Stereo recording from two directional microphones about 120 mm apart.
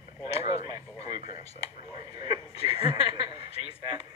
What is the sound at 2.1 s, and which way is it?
Speech, 35° right (ahead or behind).